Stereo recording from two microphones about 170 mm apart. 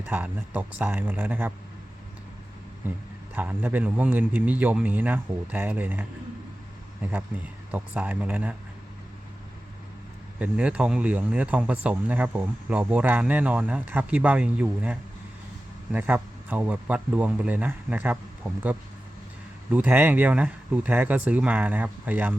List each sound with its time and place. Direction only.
0.0 s speech: 10° right (ahead or behind)
3.3 s speech: 10° right (ahead or behind)
7.7 s speech: 10° right (ahead or behind)
10.4 s speech: 5° right (ahead or behind)
19.7 s speech: 10° right (ahead or behind)